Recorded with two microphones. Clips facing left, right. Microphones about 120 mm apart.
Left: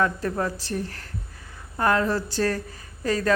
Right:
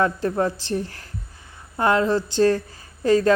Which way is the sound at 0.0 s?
30° right (ahead or behind).